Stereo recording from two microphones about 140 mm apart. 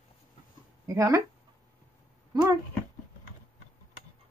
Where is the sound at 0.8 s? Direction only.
25° right (ahead or behind).